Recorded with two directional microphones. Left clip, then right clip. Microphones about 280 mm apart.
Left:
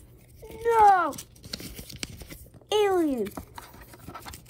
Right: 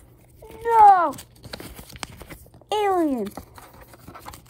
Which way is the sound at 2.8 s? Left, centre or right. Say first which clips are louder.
Right 3 dB; right.